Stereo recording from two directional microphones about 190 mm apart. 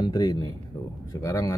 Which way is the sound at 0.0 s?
20° left (ahead or behind).